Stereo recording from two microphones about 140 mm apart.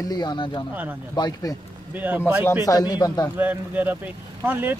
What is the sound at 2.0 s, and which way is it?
Speech, 10° right (ahead or behind).